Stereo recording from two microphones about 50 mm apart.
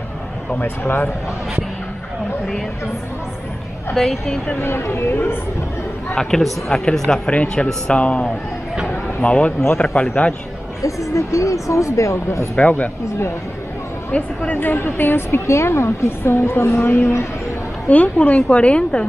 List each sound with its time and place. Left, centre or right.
0.6 s a woman's voice: left
3.9 s a woman's voice: centre
4.6 s a woman's voice: left
6.7 s a woman's voice: centre; by 10.3 s left
10.8 s speech: left
12.5 s speech: left
14.1 s a woman's voice: left
14.6 s a woman's voice: left
17.8 s a woman's voice: left